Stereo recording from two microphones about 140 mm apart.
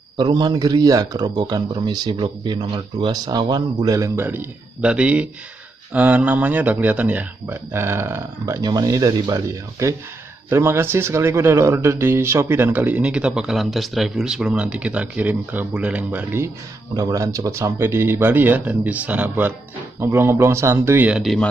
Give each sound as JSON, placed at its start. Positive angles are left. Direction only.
{"t": 0.2, "sound": "a man's voice", "side_deg": -30}
{"t": 16.9, "sound": "a man's voice", "side_deg": -25}
{"t": 21.2, "sound": "speech", "side_deg": 0}